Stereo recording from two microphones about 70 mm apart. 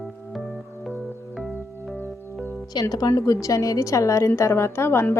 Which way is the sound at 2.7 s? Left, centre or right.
Left.